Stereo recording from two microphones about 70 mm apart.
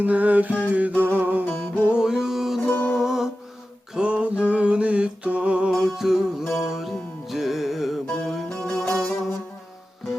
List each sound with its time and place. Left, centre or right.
0.0 s mantra: right
1.5 s music: left
1.9 s music: centre
2.6 s music: left
3.0 s music: centre
3.9 s a sound: centre
5.8 s music: centre
8.0 s music: centre